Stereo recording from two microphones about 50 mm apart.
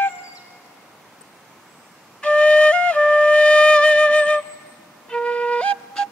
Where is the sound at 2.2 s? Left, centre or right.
Left.